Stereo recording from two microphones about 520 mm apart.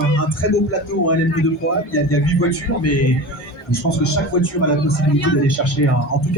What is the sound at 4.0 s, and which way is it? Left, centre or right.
Speech, left.